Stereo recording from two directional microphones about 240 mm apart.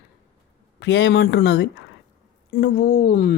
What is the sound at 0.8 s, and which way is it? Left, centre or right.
Speech, left.